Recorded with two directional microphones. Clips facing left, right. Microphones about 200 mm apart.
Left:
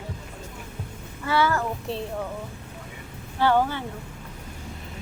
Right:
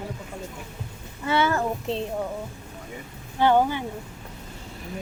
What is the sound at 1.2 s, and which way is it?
Speech, 20° right (ahead or behind).